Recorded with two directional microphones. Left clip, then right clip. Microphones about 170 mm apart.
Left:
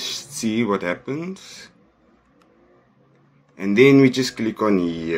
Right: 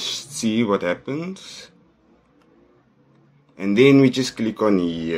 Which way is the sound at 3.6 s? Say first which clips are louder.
Left 1 dB; 10° right (ahead or behind).